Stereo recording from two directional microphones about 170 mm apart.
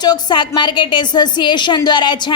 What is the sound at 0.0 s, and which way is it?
A woman's voice, 25° left (ahead or behind).